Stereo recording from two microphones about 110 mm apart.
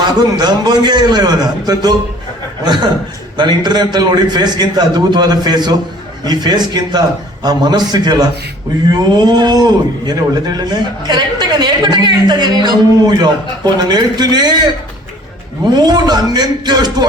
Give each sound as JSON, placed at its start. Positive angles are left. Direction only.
{"t": 0.2, "sound": "a man's voice", "side_deg": -35}
{"t": 3.3, "sound": "a man's voice", "side_deg": -40}
{"t": 15.6, "sound": "a man's voice", "side_deg": -40}